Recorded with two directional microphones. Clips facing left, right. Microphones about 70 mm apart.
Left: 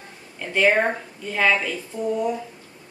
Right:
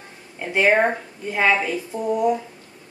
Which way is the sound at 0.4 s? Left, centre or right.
Right.